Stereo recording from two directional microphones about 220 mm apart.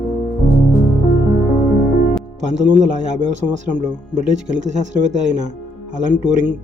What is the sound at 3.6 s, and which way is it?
Speech, 35° right (ahead or behind).